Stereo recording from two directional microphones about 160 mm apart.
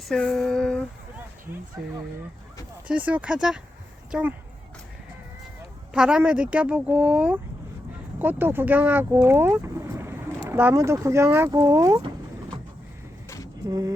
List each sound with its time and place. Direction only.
0.1 s a sound: 5° left (ahead or behind)
2.8 s speech: 10° right (ahead or behind)
5.9 s speech: 5° right (ahead or behind)
13.2 s vehicle: 20° left (ahead or behind)
13.7 s speech: 20° right (ahead or behind)